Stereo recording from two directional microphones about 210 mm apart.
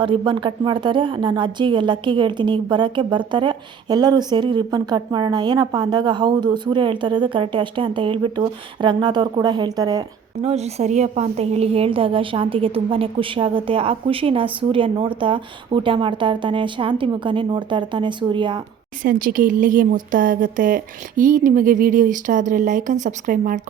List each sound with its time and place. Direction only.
0.0 s speech: 25° right (ahead or behind)
10.4 s speech: 30° right (ahead or behind)
19.0 s speech: 40° right (ahead or behind)